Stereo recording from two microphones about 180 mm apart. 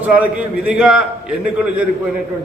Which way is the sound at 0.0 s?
10° right (ahead or behind).